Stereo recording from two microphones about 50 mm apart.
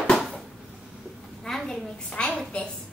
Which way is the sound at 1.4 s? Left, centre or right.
Centre.